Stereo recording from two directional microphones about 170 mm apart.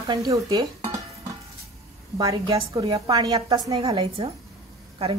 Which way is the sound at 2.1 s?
25° right (ahead or behind).